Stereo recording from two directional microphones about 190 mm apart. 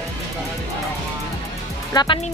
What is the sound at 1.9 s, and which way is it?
Speech, 25° left (ahead or behind).